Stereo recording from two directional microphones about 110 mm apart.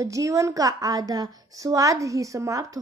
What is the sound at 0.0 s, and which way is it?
A woman's voice, 30° right (ahead or behind).